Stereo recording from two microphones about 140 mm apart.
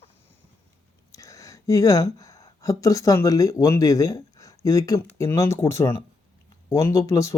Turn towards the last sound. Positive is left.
turn(degrees=25)  # may be behind; listen again after turning